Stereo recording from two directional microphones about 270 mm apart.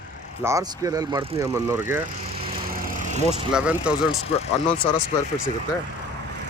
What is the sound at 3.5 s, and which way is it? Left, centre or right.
Speech, centre.